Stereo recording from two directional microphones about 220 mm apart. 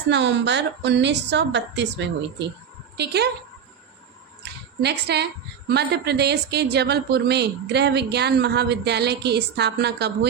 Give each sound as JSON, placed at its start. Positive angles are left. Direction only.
{"t": 0.1, "sound": "a woman's voice", "side_deg": -55}
{"t": 4.8, "sound": "a woman's voice", "side_deg": -50}